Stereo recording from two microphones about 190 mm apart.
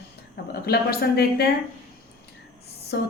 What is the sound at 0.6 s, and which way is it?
Speech, 55° left (ahead or behind).